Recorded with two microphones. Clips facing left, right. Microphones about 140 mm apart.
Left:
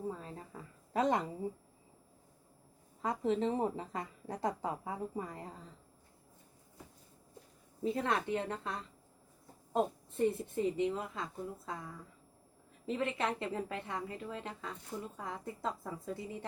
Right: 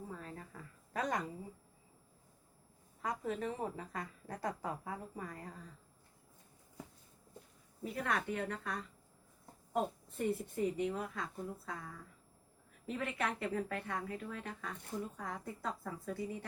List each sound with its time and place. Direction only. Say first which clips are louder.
0.1 s a sound: left 3 dB; 20° left (ahead or behind)
3.0 s a woman's voice: left 6 dB; 25° left (ahead or behind)
7.9 s a woman's voice: left 4 dB; 25° left (ahead or behind)
10.2 s a woman's voice: left 3 dB; 20° left (ahead or behind)
12.9 s a woman's voice: left 4 dB; 20° left (ahead or behind)